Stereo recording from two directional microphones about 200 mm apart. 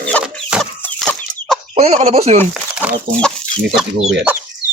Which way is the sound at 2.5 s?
5° right (ahead or behind).